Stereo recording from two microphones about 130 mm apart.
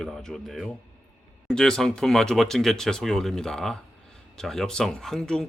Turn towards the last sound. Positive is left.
turn(degrees=5)  # may be behind; listen again after turning